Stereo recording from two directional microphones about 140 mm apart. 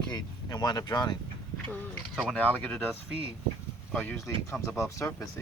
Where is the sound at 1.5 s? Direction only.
10° left (ahead or behind).